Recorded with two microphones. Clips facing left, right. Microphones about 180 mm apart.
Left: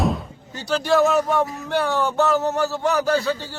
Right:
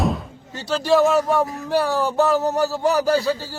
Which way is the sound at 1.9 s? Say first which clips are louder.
Even; 35° right (ahead or behind).